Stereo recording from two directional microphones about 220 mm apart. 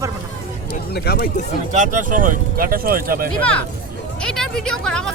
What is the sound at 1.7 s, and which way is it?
Speech, 35° right (ahead or behind).